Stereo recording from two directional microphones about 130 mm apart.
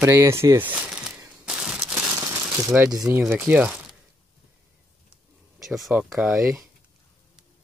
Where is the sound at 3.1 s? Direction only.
15° right (ahead or behind).